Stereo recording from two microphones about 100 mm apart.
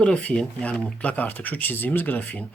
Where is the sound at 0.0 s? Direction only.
10° left (ahead or behind).